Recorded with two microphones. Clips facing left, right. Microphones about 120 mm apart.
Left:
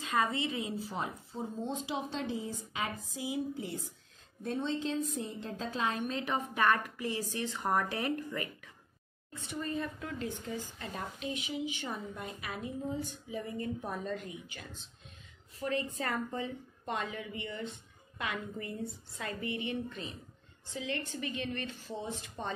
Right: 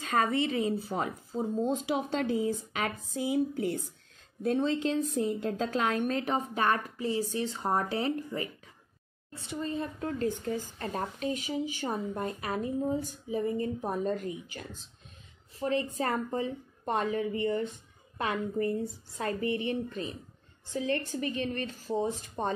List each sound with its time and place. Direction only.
0.0 s a sound: 60° right (ahead or behind)
1.7 s a woman's voice: 75° right (ahead or behind)
3.1 s speech: 65° right (ahead or behind)
4.4 s a woman's voice: 85° right; by 6.2 s 55° right (ahead or behind)
6.2 s a woman's voice: 35° right (ahead or behind)
13.5 s a woman's voice: 30° right (ahead or behind)
14.1 s a woman's voice: 40° right (ahead or behind)
15.6 s a woman's voice: 30° right (ahead or behind)